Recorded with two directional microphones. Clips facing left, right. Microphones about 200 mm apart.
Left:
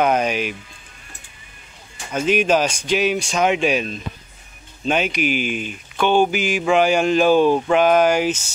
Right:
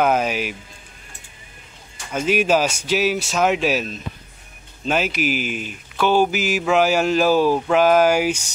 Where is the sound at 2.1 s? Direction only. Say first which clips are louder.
Left 1 dB; 5° right (ahead or behind).